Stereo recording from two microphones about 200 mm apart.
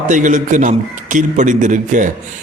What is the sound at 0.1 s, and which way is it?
A man's voice, 40° right (ahead or behind).